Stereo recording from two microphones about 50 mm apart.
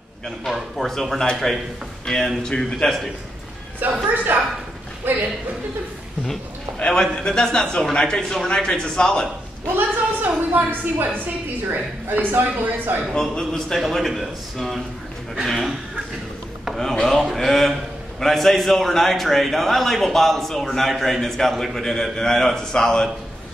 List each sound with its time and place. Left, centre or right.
0.5 s a man's voice: centre
4.1 s a woman's voice: right
6.8 s a man's voice: centre
9.7 s a woman's voice: right
13.1 s a man's voice: centre
17.1 s a man's voice: centre